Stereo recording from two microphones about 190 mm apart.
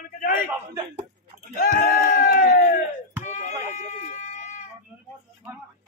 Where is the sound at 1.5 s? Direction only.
50° left (ahead or behind).